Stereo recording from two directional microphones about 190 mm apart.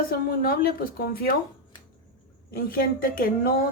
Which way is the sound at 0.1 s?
50° left (ahead or behind).